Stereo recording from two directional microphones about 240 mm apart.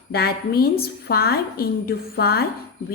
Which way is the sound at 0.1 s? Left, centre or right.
Left.